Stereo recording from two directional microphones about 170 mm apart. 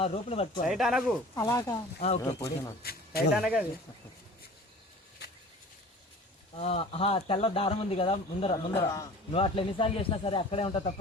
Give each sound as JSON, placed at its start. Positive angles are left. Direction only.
{"t": 0.0, "sound": "speech", "side_deg": 35}
{"t": 0.7, "sound": "speech", "side_deg": 0}
{"t": 1.4, "sound": "speech", "side_deg": 15}
{"t": 2.8, "sound": "speech", "side_deg": 65}
{"t": 3.3, "sound": "speech", "side_deg": -5}
{"t": 6.6, "sound": "speech", "side_deg": 35}
{"t": 8.8, "sound": "speech", "side_deg": 20}
{"t": 9.3, "sound": "speech", "side_deg": 30}